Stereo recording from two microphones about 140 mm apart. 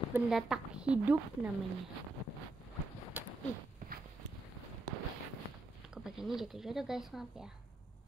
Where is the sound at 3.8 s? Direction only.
75° right (ahead or behind).